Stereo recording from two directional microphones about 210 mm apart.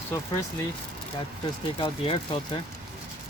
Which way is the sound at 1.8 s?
25° left (ahead or behind).